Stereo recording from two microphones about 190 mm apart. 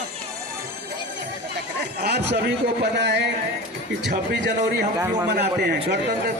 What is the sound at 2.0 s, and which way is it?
A man's voice, 60° right (ahead or behind).